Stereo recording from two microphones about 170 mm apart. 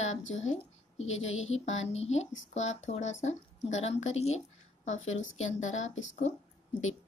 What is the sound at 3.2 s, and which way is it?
A woman's voice, 40° left (ahead or behind).